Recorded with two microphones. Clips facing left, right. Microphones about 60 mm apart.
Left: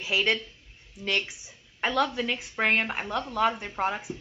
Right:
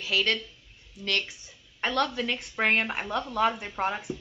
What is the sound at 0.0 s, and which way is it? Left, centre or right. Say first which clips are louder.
A woman's voice: left 1 dB; centre.